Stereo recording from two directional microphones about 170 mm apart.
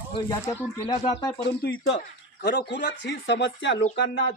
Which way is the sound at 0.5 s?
15° left (ahead or behind).